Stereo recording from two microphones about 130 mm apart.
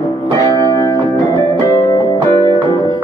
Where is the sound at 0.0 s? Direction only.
30° left (ahead or behind).